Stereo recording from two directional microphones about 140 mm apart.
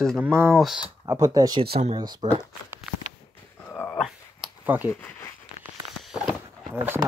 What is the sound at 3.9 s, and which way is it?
Dog, 5° right (ahead or behind).